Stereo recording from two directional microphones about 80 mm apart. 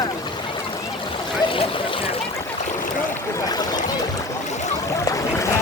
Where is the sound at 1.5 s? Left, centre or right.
Left.